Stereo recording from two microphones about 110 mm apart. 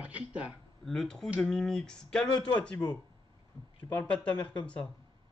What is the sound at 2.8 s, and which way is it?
Speech, 40° left (ahead or behind).